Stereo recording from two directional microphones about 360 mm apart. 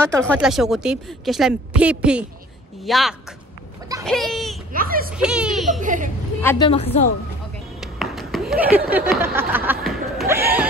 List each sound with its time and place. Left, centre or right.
0.0 s a woman's voice: centre
4.7 s a child's voice: right
5.1 s children playing: centre
5.8 s a child's voice: right
6.4 s a woman's voice: centre
7.8 s a sound: centre
8.9 s a woman's voice: centre
9.7 s laughter: centre